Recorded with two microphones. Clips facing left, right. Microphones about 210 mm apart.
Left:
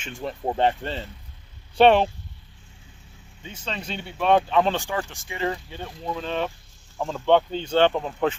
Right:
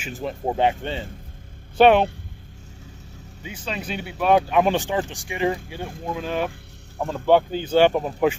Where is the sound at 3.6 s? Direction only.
5° right (ahead or behind).